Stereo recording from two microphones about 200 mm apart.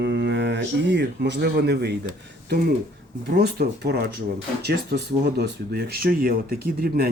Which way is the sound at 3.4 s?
55° right (ahead or behind).